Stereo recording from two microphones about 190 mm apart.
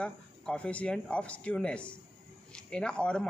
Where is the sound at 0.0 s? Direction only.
5° left (ahead or behind).